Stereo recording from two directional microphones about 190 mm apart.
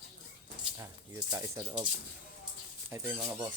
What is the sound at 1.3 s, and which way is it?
Speech, 15° right (ahead or behind).